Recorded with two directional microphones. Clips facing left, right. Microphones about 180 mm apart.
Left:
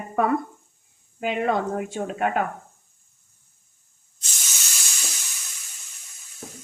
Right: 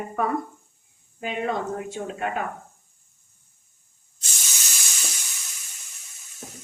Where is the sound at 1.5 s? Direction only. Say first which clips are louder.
Left 4 dB; 60° left (ahead or behind).